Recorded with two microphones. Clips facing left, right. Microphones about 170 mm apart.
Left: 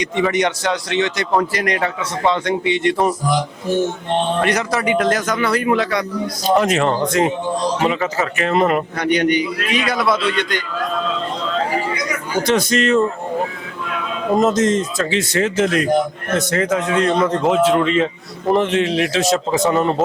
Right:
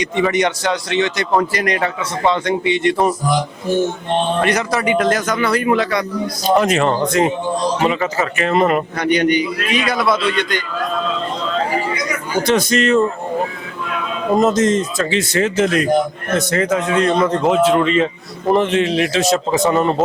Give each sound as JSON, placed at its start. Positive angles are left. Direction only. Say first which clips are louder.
{"t": 0.0, "sound": "a man's voice", "louder": "right 1 dB", "side_deg": -5}
{"t": 3.7, "sound": "mantra", "louder": "right 1 dB", "side_deg": -40}
{"t": 4.1, "sound": "a man's voice", "louder": "right 1 dB", "side_deg": -10}
{"t": 13.0, "sound": "a man's voice", "louder": "right 1 dB", "side_deg": -20}